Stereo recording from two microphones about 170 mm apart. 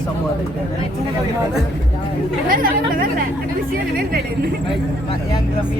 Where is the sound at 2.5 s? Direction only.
55° right (ahead or behind).